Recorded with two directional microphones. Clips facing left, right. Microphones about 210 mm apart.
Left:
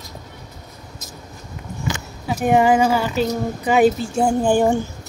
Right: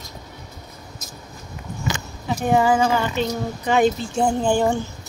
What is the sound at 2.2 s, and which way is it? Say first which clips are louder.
Speech: left 3 dB; 15° left (ahead or behind).